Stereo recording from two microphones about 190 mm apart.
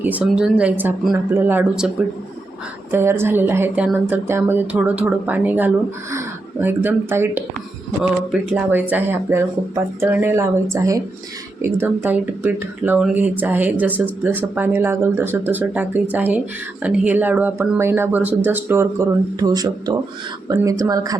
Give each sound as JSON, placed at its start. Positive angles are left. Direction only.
{"t": 0.0, "sound": "speech", "side_deg": -10}
{"t": 2.9, "sound": "speech", "side_deg": -15}